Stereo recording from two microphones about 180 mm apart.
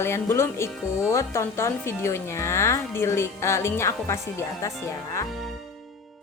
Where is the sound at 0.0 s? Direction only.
15° left (ahead or behind).